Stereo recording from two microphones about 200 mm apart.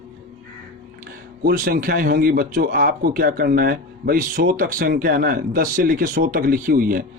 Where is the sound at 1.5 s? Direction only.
45° right (ahead or behind).